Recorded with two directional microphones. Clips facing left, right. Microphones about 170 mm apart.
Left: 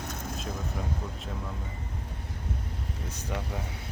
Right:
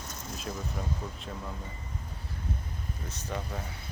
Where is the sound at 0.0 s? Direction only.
60° left (ahead or behind).